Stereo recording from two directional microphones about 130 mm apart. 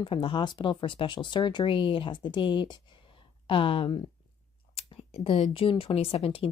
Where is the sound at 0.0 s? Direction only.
40° left (ahead or behind).